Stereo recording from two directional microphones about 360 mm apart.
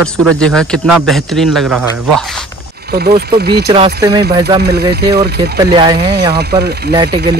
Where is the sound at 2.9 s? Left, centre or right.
Right.